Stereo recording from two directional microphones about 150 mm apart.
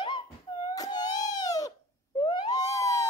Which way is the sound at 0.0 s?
30° left (ahead or behind).